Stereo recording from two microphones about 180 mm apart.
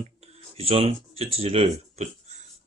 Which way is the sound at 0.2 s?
35° right (ahead or behind).